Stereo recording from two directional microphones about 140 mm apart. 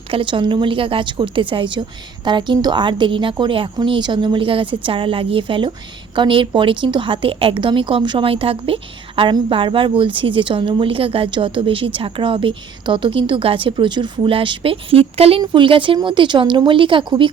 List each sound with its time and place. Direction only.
0.1 s speech: 35° right (ahead or behind)